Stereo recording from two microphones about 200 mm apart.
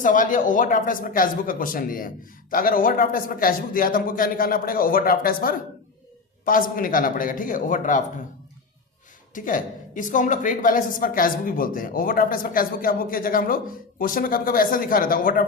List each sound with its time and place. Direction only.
0.0 s a woman's voice: 40° left (ahead or behind)
9.3 s a woman's voice: 40° left (ahead or behind)